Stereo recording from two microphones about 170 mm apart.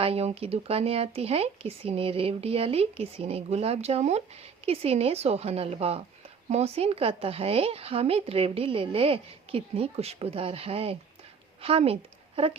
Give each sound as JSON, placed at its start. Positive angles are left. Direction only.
{"t": 0.0, "sound": "speech", "side_deg": -35}